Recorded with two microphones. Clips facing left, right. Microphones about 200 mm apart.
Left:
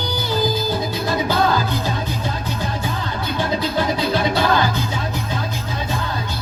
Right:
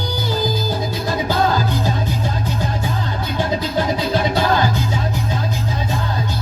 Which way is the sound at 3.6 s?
45° right (ahead or behind).